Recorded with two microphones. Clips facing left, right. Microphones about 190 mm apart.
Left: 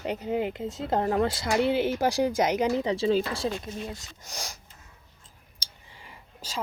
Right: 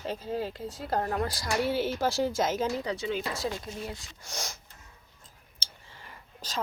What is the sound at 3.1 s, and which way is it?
Speech, 30° left (ahead or behind).